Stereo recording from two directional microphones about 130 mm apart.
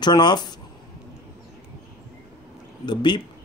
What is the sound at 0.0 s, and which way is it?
Speech, 35° left (ahead or behind).